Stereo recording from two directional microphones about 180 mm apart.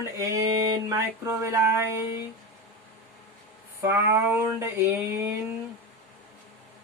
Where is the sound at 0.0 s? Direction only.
20° right (ahead or behind).